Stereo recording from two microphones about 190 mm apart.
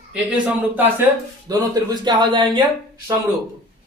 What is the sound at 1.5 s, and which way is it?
Speech, 20° right (ahead or behind).